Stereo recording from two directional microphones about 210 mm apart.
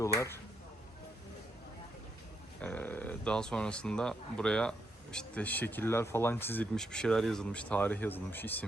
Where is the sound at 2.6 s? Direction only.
5° left (ahead or behind).